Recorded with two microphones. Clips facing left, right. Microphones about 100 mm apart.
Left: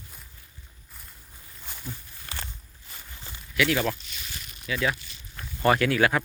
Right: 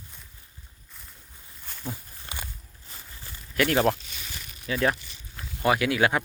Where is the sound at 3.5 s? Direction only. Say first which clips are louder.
Right 2 dB; 45° right (ahead or behind).